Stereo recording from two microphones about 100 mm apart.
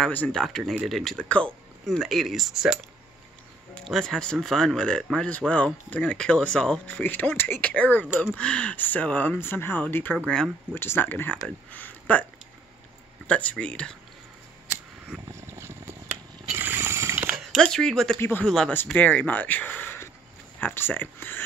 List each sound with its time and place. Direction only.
0.3 s speech: 5° left (ahead or behind)
3.8 s speech: 5° left (ahead or behind); by 10.1 s 20° left (ahead or behind)
10.2 s speech: 5° left (ahead or behind)
10.7 s speech: 20° left (ahead or behind)
13.3 s speech: 10° left (ahead or behind)
14.7 s scissors: 25° right (ahead or behind)
16.5 s a sound: 20° right (ahead or behind)
17.6 s speech: 5° left (ahead or behind)
18.7 s speech: 20° left (ahead or behind)